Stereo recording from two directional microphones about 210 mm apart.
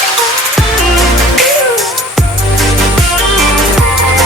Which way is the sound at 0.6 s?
Centre (ahead or behind).